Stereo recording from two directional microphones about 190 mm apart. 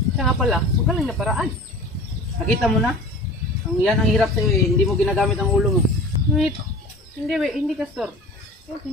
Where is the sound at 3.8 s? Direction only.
Centre (ahead or behind).